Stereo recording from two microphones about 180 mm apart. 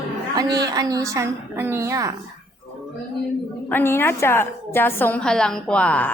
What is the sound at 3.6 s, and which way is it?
A woman's voice, 10° left (ahead or behind).